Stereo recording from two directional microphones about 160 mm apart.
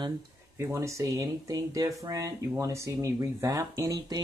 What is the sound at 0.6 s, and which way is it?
Speech, 20° right (ahead or behind).